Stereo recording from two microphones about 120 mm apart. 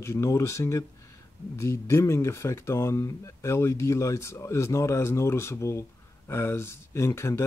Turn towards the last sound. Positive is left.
turn(degrees=25)  # may be behind; listen again after turning